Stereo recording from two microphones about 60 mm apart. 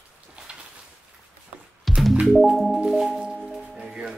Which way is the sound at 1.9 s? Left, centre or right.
Centre.